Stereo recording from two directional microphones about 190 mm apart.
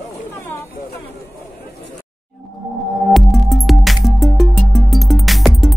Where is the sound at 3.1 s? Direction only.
Centre (ahead or behind).